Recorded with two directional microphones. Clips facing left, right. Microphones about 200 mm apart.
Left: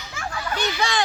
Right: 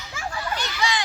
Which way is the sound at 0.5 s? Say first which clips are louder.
Left 5 dB; 55° left (ahead or behind).